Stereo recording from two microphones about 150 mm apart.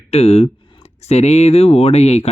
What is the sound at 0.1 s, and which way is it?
Speech, 45° left (ahead or behind).